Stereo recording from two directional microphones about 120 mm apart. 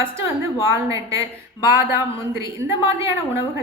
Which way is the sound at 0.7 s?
25° right (ahead or behind).